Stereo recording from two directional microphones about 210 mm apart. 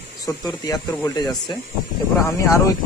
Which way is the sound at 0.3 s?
15° left (ahead or behind).